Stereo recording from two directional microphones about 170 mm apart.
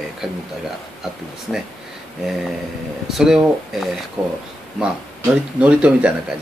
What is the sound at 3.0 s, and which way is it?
Speech, centre (ahead or behind).